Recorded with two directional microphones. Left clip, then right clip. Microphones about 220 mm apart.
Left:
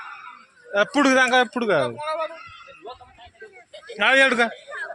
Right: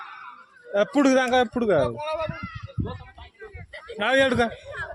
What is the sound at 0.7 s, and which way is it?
A man's voice, 20° right (ahead or behind).